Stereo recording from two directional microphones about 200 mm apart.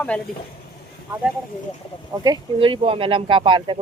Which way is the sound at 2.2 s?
20° right (ahead or behind).